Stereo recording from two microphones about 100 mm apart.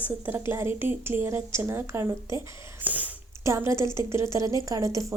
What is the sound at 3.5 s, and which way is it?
A woman's voice, 30° right (ahead or behind).